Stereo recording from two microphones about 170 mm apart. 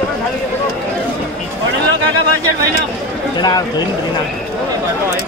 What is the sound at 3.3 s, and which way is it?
Speech, 25° left (ahead or behind).